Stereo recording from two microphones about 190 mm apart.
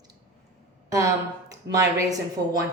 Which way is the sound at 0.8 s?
15° right (ahead or behind).